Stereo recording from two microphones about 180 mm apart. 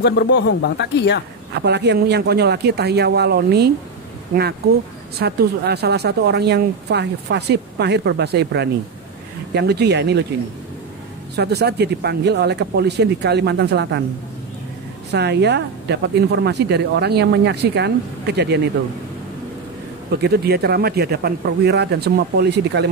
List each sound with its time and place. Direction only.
0.0 s speech: 70° left (ahead or behind)
1.5 s speech: 70° right (ahead or behind)
5.2 s speech: 65° right (ahead or behind)
11.3 s speech: 65° right (ahead or behind)
15.0 s speech: 70° right (ahead or behind)
20.1 s speech: 60° right (ahead or behind)